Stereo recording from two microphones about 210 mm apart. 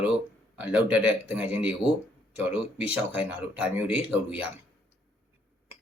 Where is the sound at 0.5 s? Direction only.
5° right (ahead or behind).